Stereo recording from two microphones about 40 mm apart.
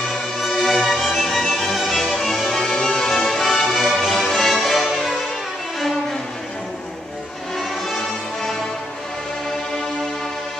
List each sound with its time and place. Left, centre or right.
0.5 s music: centre
1.4 s music: centre
5.8 s violin: centre